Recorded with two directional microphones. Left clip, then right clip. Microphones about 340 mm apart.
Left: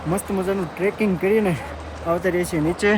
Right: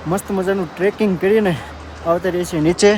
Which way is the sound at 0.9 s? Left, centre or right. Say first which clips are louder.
Right 4 dB; centre.